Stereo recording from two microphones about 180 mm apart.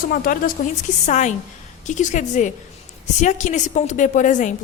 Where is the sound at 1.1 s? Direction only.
40° left (ahead or behind).